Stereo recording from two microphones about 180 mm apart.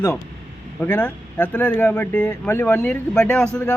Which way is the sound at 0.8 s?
10° left (ahead or behind).